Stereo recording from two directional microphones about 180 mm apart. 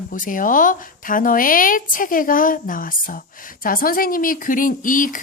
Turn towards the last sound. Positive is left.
turn(degrees=50)  # may be behind; listen again after turning